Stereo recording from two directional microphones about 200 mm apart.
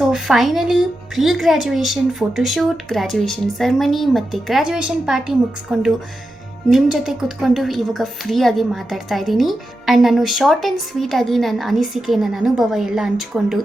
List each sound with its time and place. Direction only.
0.0 s a woman's voice: centre (ahead or behind)